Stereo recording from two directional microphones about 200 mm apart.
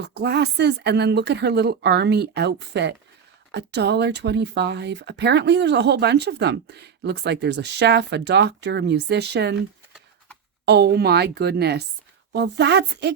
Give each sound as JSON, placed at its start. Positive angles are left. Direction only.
{"t": 0.0, "sound": "speech", "side_deg": -55}
{"t": 10.7, "sound": "speech", "side_deg": -55}